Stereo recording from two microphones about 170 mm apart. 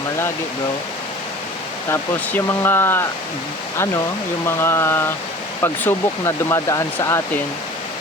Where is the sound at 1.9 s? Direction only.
15° left (ahead or behind).